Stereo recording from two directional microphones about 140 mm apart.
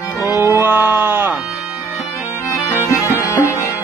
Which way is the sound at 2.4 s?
20° left (ahead or behind).